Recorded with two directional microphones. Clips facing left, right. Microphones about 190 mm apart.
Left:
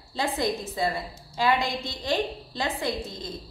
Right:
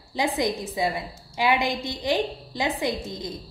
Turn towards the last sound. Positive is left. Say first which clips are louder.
# right 2 dB
turn(degrees=-15)  # may be behind; listen again after turning